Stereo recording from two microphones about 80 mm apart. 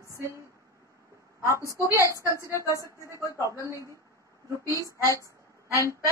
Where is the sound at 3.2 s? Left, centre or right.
Left.